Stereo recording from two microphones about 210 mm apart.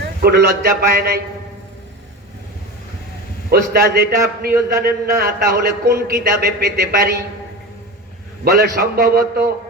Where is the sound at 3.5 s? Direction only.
50° right (ahead or behind).